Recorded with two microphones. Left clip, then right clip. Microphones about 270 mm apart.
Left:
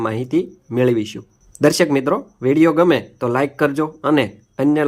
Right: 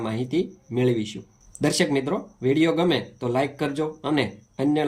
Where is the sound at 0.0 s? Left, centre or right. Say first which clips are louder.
Left 6 dB; centre.